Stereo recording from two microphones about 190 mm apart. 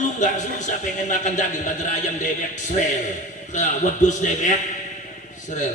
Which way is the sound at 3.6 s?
40° left (ahead or behind).